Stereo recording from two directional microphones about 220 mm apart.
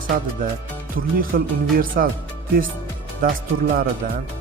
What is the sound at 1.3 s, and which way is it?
Speech, 45° right (ahead or behind).